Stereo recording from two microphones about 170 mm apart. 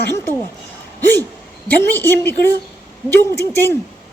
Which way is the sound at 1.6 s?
10° left (ahead or behind).